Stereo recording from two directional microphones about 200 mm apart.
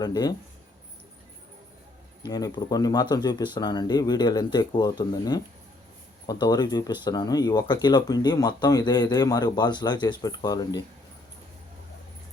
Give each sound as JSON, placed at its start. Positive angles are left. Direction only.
{"t": 0.0, "sound": "speech", "side_deg": 20}
{"t": 2.2, "sound": "speech", "side_deg": 20}